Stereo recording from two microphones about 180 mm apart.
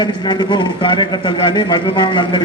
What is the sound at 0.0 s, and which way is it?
A man's voice, 25° left (ahead or behind).